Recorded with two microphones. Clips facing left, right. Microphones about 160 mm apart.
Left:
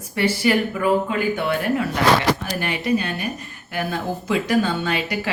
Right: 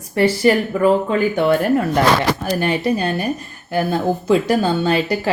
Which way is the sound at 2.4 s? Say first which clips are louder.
Right 7 dB; 35° right (ahead or behind).